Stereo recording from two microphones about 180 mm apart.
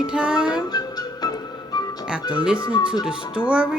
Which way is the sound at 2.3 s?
5° right (ahead or behind).